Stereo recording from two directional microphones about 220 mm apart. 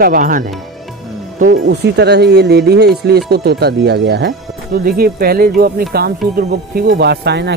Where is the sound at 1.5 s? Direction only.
55° right (ahead or behind).